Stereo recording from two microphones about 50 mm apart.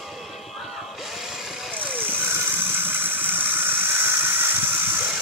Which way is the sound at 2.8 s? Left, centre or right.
Right.